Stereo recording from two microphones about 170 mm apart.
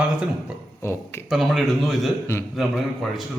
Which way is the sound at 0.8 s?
15° left (ahead or behind).